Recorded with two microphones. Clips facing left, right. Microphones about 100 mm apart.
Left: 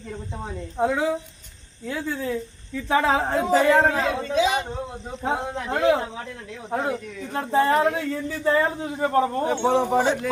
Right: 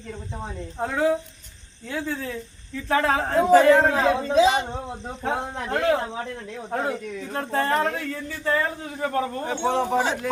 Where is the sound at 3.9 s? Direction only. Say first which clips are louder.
Right 3 dB; 25° right (ahead or behind).